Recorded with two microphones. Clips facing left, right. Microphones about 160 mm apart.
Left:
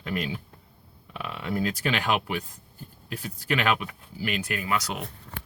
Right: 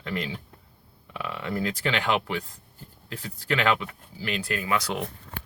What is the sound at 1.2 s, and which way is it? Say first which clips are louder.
Speech: even; 10° left (ahead or behind).